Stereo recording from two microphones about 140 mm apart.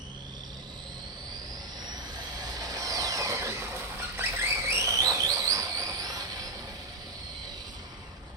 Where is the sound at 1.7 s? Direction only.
30° right (ahead or behind).